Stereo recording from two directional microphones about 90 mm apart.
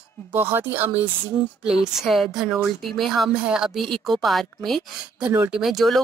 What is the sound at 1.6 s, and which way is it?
Speech, 5° right (ahead or behind).